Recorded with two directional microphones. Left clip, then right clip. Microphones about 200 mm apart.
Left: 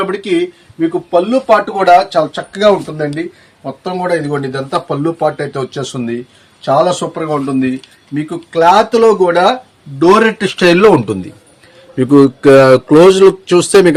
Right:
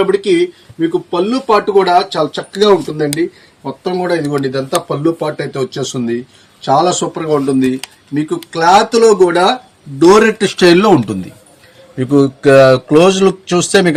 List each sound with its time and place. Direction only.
0.1 s speech: 15° left (ahead or behind)
3.8 s speech: 25° left (ahead or behind)
10.0 s speech: 40° left (ahead or behind)
11.9 s a man's voice: 60° left (ahead or behind)